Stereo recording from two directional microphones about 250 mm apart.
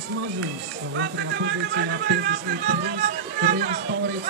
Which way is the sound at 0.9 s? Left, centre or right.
Right.